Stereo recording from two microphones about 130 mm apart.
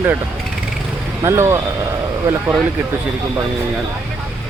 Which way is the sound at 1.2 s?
20° right (ahead or behind).